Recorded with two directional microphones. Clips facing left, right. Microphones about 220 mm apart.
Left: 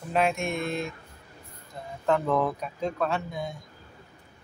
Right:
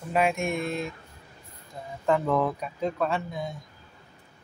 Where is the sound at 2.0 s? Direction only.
5° right (ahead or behind).